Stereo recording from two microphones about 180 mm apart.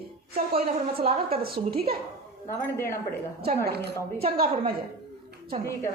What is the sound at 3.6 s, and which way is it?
Speech, 65° right (ahead or behind).